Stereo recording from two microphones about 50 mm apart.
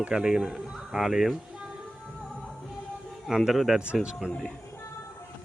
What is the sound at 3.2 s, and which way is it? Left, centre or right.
Speech, centre.